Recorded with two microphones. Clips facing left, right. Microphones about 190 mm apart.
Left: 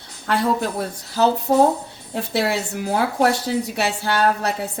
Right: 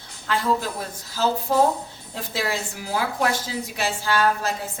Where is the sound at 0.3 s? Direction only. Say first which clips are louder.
Left 3 dB; 60° left (ahead or behind).